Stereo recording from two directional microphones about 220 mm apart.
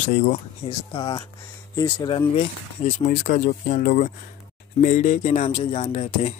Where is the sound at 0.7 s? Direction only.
20° left (ahead or behind).